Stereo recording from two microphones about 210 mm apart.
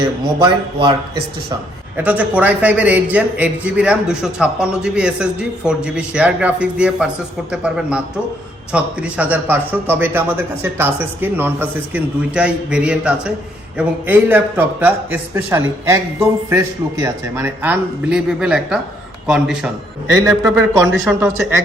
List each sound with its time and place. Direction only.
0.3 s speech: 25° right (ahead or behind)
2.0 s a man's voice: 5° right (ahead or behind)
20.2 s a man's voice: 15° right (ahead or behind)